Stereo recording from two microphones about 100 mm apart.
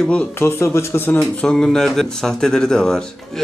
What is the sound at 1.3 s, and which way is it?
A man's voice, 10° left (ahead or behind).